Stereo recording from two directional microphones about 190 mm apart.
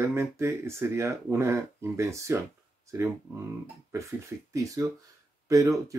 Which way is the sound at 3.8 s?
15° right (ahead or behind).